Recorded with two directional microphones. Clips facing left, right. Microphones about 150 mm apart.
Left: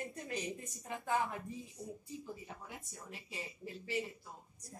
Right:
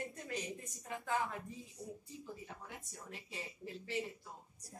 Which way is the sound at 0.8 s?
20° left (ahead or behind).